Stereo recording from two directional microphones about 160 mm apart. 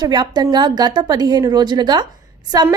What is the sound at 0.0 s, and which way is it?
A woman's voice, 25° right (ahead or behind).